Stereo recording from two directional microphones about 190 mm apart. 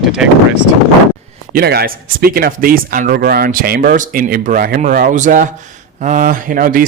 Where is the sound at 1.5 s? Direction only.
55° right (ahead or behind).